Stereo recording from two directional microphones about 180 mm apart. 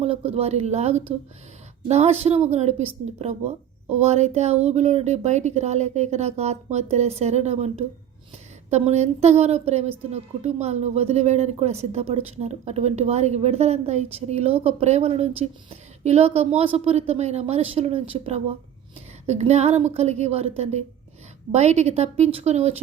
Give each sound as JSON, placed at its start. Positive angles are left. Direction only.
{"t": 0.0, "sound": "a woman's voice", "side_deg": -35}